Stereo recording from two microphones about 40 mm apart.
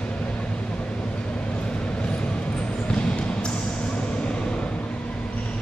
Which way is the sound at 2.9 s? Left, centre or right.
Left.